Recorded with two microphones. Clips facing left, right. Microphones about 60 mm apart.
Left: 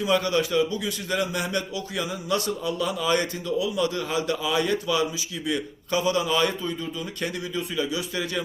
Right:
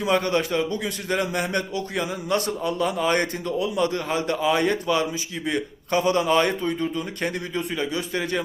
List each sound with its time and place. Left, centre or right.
0.1 s a man's voice: right